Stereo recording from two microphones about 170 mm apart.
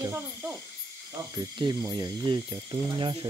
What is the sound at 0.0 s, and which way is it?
Owl, 15° right (ahead or behind).